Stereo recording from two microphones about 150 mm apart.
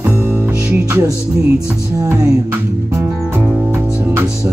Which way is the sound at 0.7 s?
15° right (ahead or behind).